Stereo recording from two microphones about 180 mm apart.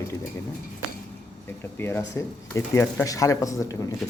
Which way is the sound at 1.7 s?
10° left (ahead or behind).